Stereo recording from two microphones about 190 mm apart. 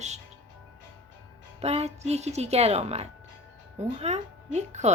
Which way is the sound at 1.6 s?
35° right (ahead or behind).